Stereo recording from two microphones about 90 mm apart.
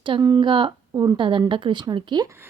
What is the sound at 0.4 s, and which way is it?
A woman's voice, 65° right (ahead or behind).